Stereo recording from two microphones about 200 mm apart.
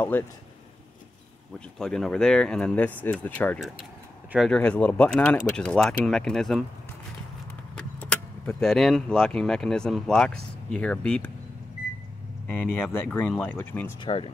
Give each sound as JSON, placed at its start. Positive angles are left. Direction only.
{"t": 0.1, "sound": "speech", "side_deg": 10}
{"t": 1.8, "sound": "speech", "side_deg": 5}
{"t": 7.7, "sound": "speech", "side_deg": 5}
{"t": 12.4, "sound": "speech", "side_deg": 10}
{"t": 14.0, "sound": "speech", "side_deg": 25}